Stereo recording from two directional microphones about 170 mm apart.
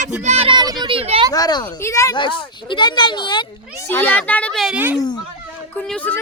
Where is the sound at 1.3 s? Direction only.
20° left (ahead or behind).